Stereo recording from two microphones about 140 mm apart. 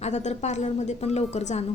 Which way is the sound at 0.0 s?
55° left (ahead or behind).